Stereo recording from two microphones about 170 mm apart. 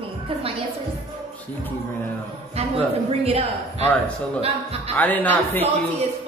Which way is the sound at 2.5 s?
35° right (ahead or behind).